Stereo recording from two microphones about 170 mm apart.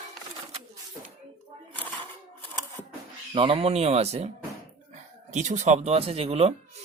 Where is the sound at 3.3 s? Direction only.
35° right (ahead or behind).